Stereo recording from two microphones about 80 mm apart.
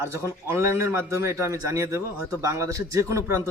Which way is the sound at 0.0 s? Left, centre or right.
Right.